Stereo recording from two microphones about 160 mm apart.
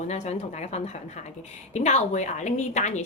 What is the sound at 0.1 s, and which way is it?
A woman's voice, 45° left (ahead or behind).